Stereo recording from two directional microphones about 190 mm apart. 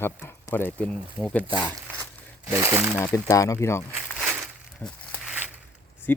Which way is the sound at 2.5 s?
15° right (ahead or behind).